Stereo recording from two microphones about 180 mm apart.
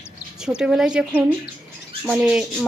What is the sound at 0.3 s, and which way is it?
Speech, 5° right (ahead or behind).